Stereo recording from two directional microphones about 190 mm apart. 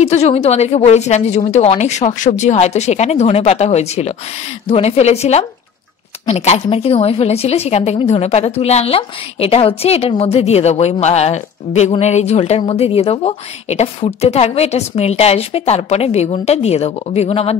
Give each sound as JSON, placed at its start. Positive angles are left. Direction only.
{"t": 0.0, "sound": "a woman's voice", "side_deg": 35}